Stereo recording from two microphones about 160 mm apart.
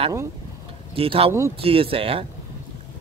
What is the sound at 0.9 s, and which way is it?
Speech, 35° right (ahead or behind).